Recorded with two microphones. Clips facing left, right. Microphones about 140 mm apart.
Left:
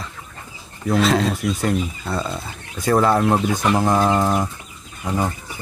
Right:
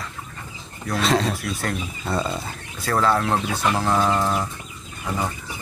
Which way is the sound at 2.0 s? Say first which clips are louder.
Even; centre (ahead or behind).